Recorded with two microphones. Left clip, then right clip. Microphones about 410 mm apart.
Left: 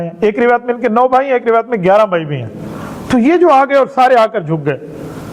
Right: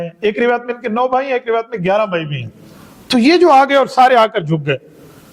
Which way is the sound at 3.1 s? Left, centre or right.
Right.